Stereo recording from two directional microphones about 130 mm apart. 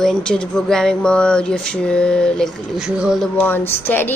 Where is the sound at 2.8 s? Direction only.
5° right (ahead or behind).